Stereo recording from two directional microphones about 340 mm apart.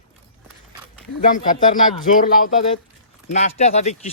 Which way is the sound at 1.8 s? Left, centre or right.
Left.